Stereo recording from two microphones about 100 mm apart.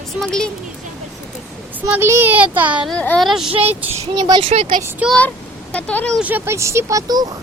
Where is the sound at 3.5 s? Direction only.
80° right.